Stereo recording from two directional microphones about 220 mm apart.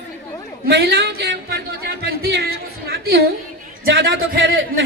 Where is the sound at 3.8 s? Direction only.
50° right (ahead or behind).